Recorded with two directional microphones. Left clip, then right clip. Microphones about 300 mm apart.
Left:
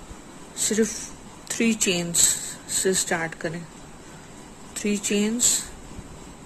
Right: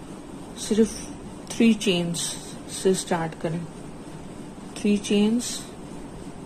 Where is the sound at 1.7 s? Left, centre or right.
Left.